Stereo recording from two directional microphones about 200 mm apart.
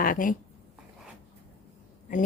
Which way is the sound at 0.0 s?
45° left (ahead or behind).